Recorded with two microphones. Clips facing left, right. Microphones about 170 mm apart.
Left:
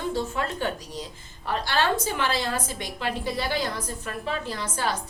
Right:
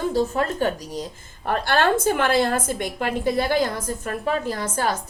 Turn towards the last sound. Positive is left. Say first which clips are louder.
# right 5 dB
turn(degrees=-45)  # may be behind; listen again after turning